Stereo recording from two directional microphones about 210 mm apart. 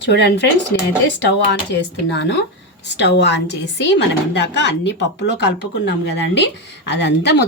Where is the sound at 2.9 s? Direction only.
55° left (ahead or behind).